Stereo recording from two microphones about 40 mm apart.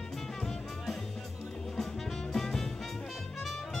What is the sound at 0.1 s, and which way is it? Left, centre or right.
Music, centre.